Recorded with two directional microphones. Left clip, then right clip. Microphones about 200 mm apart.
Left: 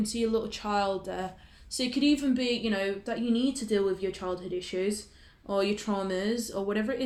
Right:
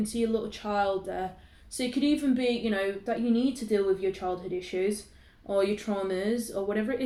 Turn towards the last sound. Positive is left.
turn(degrees=40)  # may be behind; listen again after turning